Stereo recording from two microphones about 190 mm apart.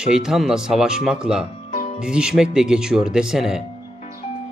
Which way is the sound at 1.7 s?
40° left (ahead or behind).